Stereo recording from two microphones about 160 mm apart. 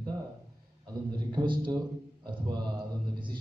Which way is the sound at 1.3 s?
30° right (ahead or behind).